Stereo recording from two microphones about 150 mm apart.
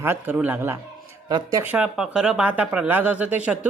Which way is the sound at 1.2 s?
25° right (ahead or behind).